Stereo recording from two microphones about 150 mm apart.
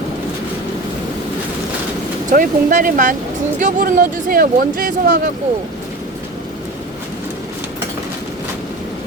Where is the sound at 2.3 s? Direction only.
65° right (ahead or behind).